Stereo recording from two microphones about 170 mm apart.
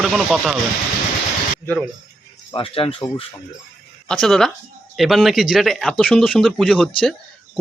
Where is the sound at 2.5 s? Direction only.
30° left (ahead or behind).